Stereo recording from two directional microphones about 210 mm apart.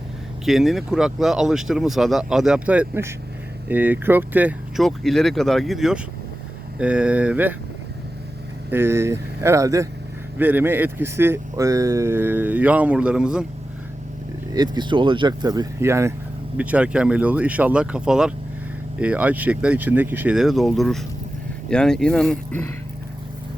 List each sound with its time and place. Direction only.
0.4 s speech: centre (ahead or behind)
8.7 s speech: 10° right (ahead or behind)
14.5 s speech: 20° right (ahead or behind); by 22.6 s 5° left (ahead or behind)